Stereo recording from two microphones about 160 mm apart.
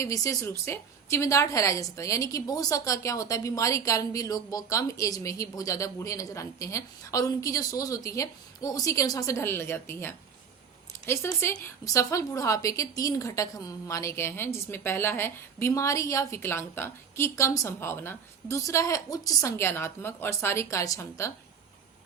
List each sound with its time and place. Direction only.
0.0 s a woman's voice: 20° left (ahead or behind)